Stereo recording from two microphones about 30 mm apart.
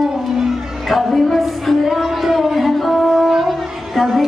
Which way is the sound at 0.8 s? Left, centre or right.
Centre.